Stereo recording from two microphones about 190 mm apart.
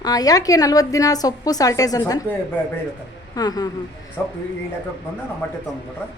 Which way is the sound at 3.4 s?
20° left (ahead or behind).